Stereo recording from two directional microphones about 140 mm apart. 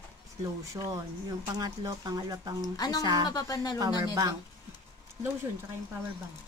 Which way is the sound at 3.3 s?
25° left (ahead or behind).